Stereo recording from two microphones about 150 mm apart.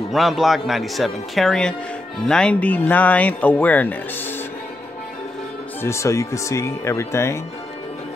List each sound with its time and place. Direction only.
0.1 s speech: centre (ahead or behind)
5.8 s speech: 20° left (ahead or behind)